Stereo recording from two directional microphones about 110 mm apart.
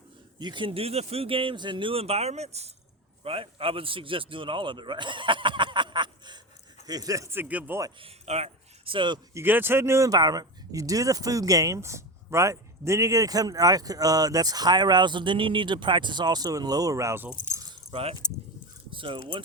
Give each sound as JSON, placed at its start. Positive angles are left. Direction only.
{"t": 0.3, "sound": "speech", "side_deg": -45}
{"t": 3.2, "sound": "a man's voice", "side_deg": -60}
{"t": 8.0, "sound": "a sound", "side_deg": -70}
{"t": 8.9, "sound": "a man's voice", "side_deg": -45}
{"t": 9.3, "sound": "speech", "side_deg": -20}
{"t": 18.2, "sound": "speech", "side_deg": 35}
{"t": 18.9, "sound": "speech", "side_deg": -50}